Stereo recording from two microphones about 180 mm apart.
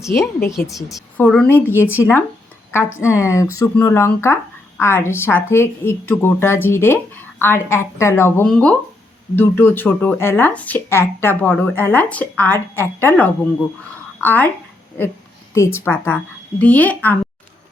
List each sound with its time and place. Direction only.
0.2 s speech: 15° left (ahead or behind)
0.9 s a woman's voice: centre (ahead or behind)
8.4 s a woman's voice: 5° left (ahead or behind)